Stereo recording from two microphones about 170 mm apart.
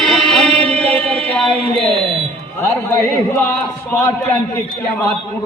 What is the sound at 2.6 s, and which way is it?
A man's voice, 15° left (ahead or behind).